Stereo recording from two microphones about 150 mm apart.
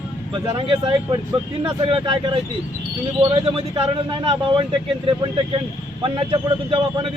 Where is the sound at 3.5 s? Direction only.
35° right (ahead or behind).